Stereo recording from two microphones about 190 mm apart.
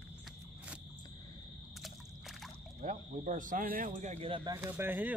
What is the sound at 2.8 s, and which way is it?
Speech, 40° right (ahead or behind).